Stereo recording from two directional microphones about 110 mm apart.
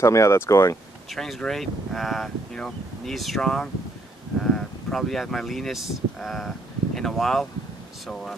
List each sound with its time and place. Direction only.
0.0 s speech: 25° left (ahead or behind)
1.1 s speech: 5° left (ahead or behind)